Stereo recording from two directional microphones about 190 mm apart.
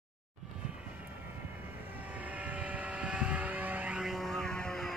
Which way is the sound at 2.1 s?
5° right (ahead or behind).